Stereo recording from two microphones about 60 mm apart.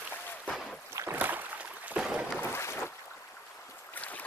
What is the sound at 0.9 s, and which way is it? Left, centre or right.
Boat, right.